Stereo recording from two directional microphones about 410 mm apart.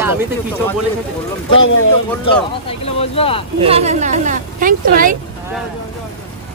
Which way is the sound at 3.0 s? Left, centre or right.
Centre.